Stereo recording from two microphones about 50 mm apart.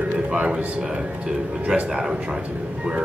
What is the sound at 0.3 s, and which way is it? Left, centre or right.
Speech, right.